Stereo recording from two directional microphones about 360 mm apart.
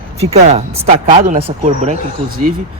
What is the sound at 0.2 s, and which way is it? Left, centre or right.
Speech, centre.